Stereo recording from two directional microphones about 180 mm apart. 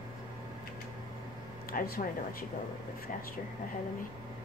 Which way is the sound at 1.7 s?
50° left (ahead or behind).